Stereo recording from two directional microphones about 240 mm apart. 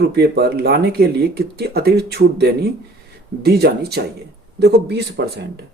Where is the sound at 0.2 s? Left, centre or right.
Right.